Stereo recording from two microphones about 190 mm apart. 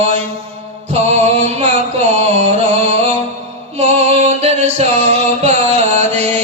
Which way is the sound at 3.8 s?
35° right (ahead or behind).